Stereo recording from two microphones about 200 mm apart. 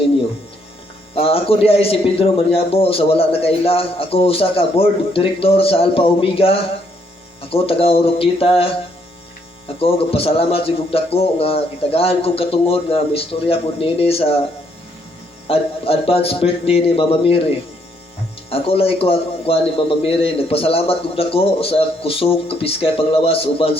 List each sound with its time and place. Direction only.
1.1 s a man's voice: 30° left (ahead or behind)
15.4 s a man's voice: 30° left (ahead or behind)
18.5 s a man's voice: 30° left (ahead or behind)